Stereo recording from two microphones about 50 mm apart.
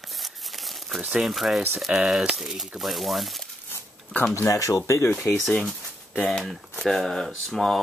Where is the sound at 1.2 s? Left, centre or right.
Centre.